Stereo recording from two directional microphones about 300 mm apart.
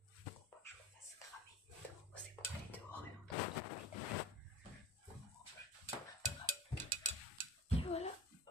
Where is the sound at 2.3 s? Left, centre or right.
Centre.